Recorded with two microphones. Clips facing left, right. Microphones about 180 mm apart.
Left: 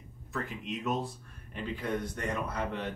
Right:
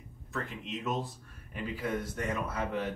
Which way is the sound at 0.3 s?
Centre (ahead or behind).